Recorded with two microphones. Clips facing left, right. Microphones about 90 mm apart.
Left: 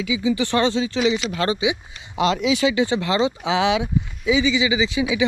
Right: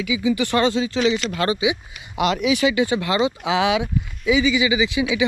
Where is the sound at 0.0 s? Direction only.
30° left (ahead or behind).